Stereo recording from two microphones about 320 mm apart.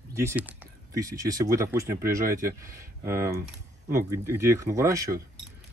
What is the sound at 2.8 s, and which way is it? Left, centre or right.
Speech, centre.